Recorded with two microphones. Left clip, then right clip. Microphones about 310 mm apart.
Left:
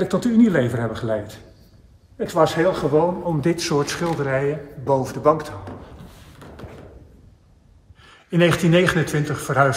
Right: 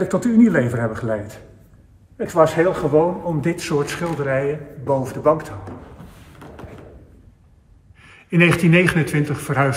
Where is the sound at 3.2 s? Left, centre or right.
Left.